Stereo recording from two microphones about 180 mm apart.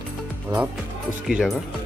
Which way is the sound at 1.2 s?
5° right (ahead or behind).